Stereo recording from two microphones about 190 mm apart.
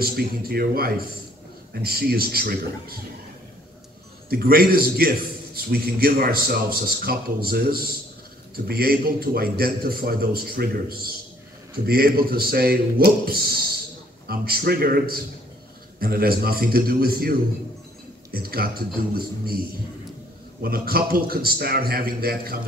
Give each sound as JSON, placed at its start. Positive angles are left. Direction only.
{"t": 0.0, "sound": "a man's voice", "side_deg": -55}
{"t": 4.3, "sound": "a man's voice", "side_deg": -50}
{"t": 20.6, "sound": "a man's voice", "side_deg": -55}